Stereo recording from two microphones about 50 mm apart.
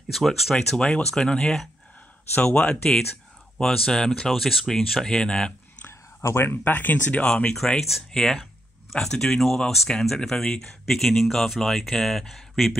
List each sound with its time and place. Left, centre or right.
0.1 s speech: centre
4.3 s speech: centre
5.9 s a sound: left
6.6 s speech: left
7.2 s speech: centre